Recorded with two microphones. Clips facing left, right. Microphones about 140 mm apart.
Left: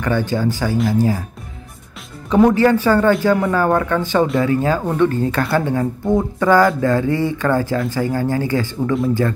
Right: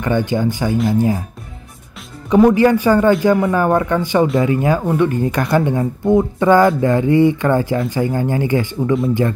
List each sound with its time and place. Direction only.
0.0 s speech: 15° right (ahead or behind)
2.2 s speech: 5° right (ahead or behind)